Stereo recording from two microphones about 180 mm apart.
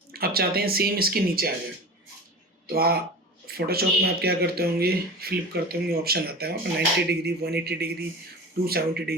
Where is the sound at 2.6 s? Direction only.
55° right (ahead or behind).